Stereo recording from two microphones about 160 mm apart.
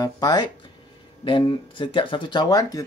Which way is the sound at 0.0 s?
25° left (ahead or behind).